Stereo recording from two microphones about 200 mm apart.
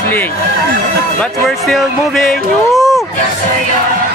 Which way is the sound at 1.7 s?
Centre (ahead or behind).